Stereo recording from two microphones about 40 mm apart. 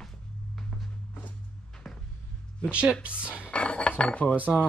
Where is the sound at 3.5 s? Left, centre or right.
Left.